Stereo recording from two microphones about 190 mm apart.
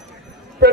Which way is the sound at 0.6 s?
60° right (ahead or behind).